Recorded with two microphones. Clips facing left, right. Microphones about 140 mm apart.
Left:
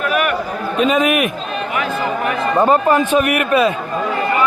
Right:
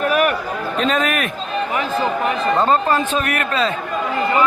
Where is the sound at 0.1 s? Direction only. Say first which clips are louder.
Even; 40° right (ahead or behind).